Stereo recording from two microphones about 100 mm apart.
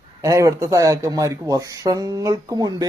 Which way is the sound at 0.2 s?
35° right (ahead or behind).